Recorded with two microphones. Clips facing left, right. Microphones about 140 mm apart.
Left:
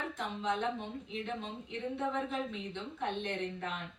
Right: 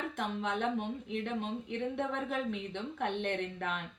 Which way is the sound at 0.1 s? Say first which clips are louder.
Right 1 dB; 60° right (ahead or behind).